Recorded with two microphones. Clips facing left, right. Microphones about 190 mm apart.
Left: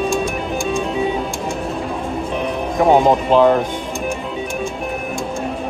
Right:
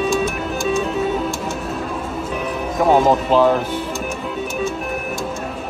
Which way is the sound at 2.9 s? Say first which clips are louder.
Left 1 dB; 15° left (ahead or behind).